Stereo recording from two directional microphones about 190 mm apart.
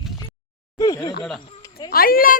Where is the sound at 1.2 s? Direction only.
Centre (ahead or behind).